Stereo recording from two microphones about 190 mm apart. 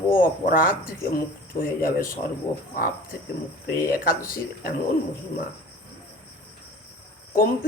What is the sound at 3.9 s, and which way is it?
Speech, 50° left (ahead or behind).